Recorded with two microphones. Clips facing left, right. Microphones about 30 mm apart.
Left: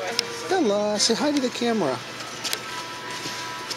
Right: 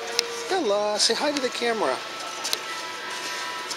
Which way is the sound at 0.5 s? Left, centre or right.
Right.